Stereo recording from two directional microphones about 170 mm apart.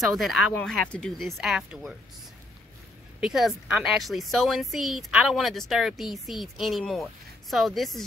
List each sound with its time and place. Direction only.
0.2 s speech: centre (ahead or behind)
3.2 s speech: 5° right (ahead or behind)